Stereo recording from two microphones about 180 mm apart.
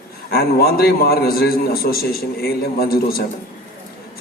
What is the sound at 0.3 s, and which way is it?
A man's voice, 60° left (ahead or behind).